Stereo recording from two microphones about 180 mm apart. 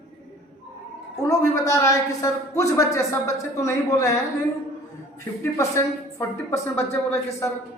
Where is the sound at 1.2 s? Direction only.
15° left (ahead or behind).